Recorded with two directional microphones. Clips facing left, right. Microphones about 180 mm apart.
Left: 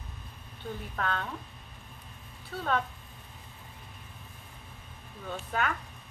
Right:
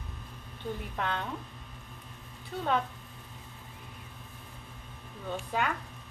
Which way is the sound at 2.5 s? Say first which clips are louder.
Right 1 dB; 15° right (ahead or behind).